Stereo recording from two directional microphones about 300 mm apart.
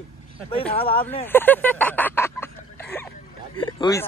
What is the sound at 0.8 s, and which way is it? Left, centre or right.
Speech, centre.